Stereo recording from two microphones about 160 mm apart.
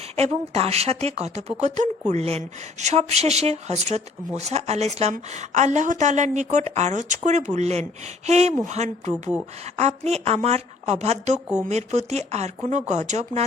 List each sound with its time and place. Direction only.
0.2 s a woman's voice: 40° right (ahead or behind)